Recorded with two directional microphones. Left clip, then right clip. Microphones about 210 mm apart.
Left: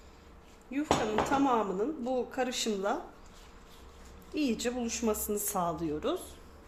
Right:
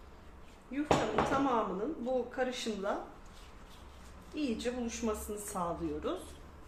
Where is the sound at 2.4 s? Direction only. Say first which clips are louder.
Left 3 dB; 45° left (ahead or behind).